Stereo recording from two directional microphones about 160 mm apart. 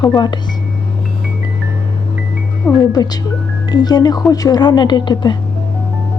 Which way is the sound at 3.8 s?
25° left (ahead or behind).